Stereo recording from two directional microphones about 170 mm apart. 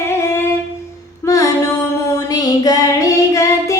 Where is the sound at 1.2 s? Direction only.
20° left (ahead or behind).